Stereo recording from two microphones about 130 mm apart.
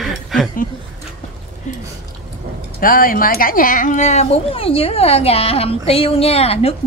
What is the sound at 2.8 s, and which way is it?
Speech, 90° left.